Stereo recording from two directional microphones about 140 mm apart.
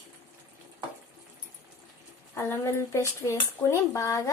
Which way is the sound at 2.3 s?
20° left (ahead or behind).